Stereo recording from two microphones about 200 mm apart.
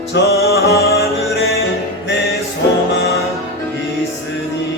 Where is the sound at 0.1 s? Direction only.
50° left (ahead or behind).